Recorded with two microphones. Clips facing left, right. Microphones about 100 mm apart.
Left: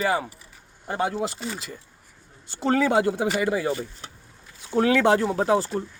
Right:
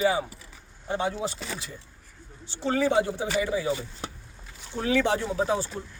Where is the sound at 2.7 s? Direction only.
55° left (ahead or behind).